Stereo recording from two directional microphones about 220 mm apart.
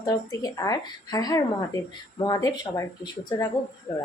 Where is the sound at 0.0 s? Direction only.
15° left (ahead or behind).